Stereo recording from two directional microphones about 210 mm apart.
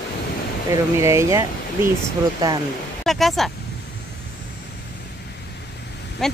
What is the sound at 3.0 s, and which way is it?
Speech, centre (ahead or behind).